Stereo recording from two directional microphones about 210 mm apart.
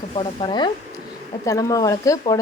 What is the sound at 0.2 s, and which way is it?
A woman's voice, 25° left (ahead or behind).